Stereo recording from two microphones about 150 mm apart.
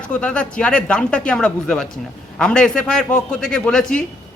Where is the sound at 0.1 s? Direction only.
10° left (ahead or behind).